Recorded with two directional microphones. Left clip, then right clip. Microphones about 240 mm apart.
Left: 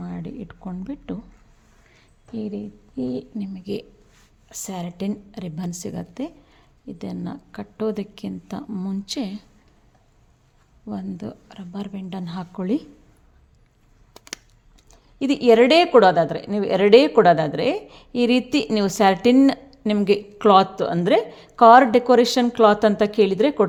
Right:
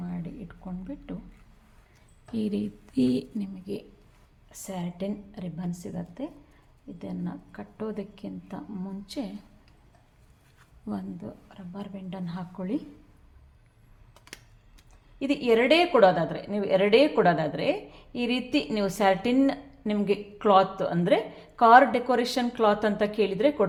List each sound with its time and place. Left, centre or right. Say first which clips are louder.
0.0 s a sound: left 5 dB; left
2.3 s speech: even; centre
3.3 s speech: left 4 dB; centre
3.6 s speech: left 9 dB; left
4.4 s a woman's voice: left 5 dB; left
10.9 s speech: left 3 dB; centre
11.2 s a woman's voice: left 7 dB; left
14.8 s a woman's voice: left 6 dB; left